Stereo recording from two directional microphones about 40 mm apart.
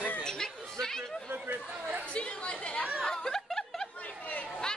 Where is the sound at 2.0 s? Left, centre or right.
Left.